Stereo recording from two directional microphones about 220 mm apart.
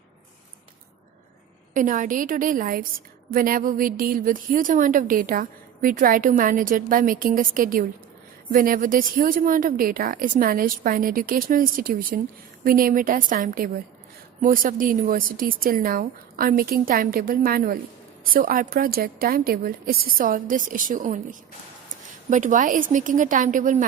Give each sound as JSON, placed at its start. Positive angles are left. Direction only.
{"t": 1.7, "sound": "a woman's voice", "side_deg": -35}